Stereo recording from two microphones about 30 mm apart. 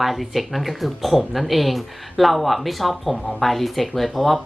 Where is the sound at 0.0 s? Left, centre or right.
Centre.